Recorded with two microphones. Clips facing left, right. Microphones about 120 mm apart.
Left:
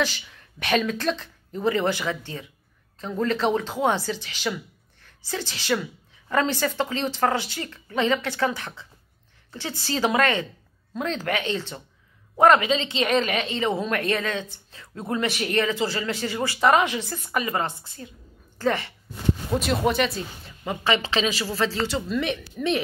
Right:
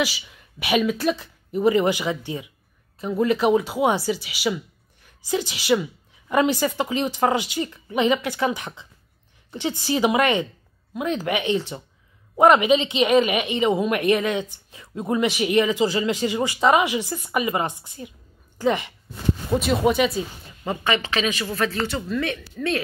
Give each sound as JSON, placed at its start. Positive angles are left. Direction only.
{"t": 0.0, "sound": "a woman's voice", "side_deg": -10}
{"t": 19.5, "sound": "speech", "side_deg": 0}
{"t": 20.9, "sound": "speech", "side_deg": 25}